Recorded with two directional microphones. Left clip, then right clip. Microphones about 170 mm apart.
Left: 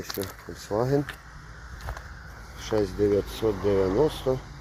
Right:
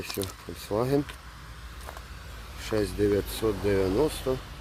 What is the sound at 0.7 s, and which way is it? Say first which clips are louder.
Speech: left 1 dB; 15° right (ahead or behind).